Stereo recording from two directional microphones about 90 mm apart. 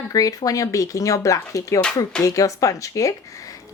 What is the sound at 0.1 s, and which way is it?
A woman's voice, 40° left (ahead or behind).